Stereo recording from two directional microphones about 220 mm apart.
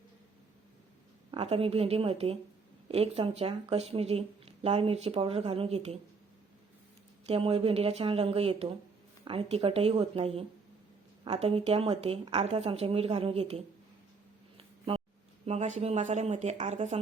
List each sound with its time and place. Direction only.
1.3 s speech: 25° right (ahead or behind)
7.3 s speech: 25° right (ahead or behind)
15.4 s speech: 30° right (ahead or behind)